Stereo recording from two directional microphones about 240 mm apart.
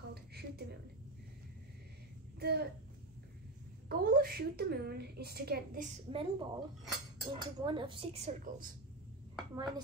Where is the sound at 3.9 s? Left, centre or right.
Right.